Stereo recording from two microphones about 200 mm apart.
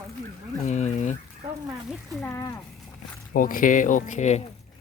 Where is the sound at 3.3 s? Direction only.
45° left (ahead or behind).